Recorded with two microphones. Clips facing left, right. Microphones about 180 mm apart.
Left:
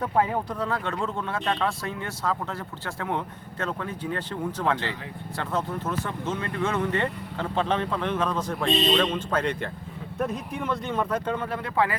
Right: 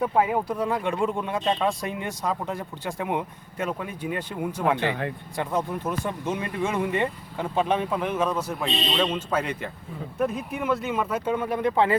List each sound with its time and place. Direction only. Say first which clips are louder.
0.0 s speech: right 2 dB; 10° right (ahead or behind)
4.9 s speech: right 7 dB; 60° right (ahead or behind)
5.4 s speech: right 2 dB; 15° right (ahead or behind)